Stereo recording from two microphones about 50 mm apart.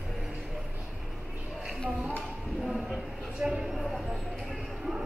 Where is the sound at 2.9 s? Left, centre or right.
Centre.